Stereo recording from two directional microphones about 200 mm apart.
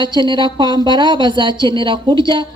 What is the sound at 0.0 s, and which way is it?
A woman's voice, 25° right (ahead or behind).